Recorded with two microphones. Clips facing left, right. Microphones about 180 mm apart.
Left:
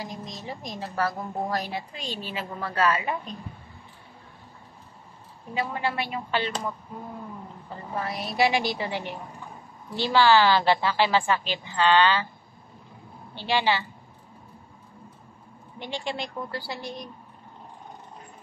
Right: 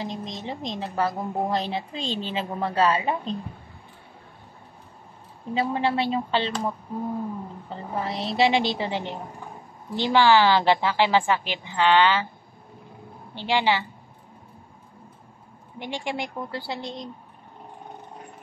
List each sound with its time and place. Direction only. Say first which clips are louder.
0.0 s a woman's voice: right 4 dB; 25° right (ahead or behind)
5.5 s a woman's voice: right 5 dB; 25° right (ahead or behind)
7.9 s a woman's voice: right 3 dB; 25° right (ahead or behind)
13.3 s a woman's voice: right 2 dB; 15° right (ahead or behind)
15.8 s a woman's voice: right 2 dB; 15° right (ahead or behind)